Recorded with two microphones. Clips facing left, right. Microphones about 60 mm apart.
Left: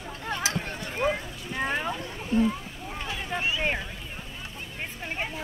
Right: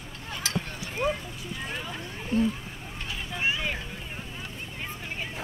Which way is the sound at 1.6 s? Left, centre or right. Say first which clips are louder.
Left 9 dB; left.